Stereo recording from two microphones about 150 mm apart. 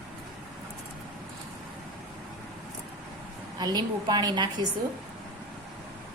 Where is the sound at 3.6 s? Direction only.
30° right (ahead or behind).